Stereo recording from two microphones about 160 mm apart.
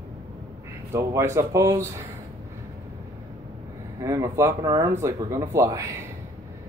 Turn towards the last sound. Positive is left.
turn(degrees=-20)  # may be behind; listen again after turning